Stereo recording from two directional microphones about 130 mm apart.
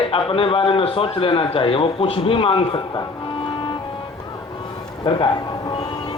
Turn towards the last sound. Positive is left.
turn(degrees=40)  # may be behind; listen again after turning